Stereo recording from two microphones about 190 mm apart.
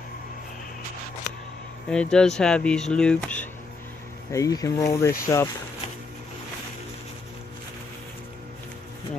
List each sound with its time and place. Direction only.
1.9 s speech: 5° left (ahead or behind)
4.3 s speech: 15° left (ahead or behind)